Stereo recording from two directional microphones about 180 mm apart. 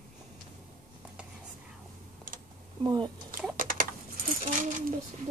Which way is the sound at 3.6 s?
50° right (ahead or behind).